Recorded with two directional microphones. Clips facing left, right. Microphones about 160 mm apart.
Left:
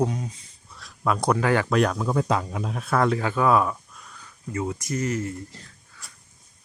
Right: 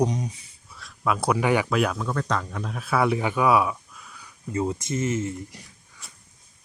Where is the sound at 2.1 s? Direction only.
10° left (ahead or behind); by 3.7 s 10° right (ahead or behind).